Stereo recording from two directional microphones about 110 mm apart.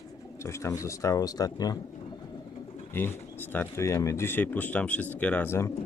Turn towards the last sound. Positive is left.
turn(degrees=20)  # may be behind; listen again after turning